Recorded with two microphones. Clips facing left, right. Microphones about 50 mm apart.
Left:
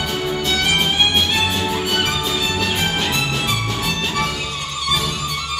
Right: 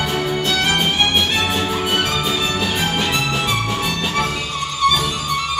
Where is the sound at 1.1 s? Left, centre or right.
Centre; by 4.3 s right.